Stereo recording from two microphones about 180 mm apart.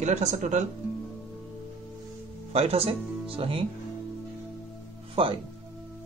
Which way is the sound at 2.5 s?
35° right (ahead or behind).